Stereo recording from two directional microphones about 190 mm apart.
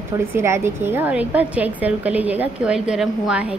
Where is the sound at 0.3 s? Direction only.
15° right (ahead or behind).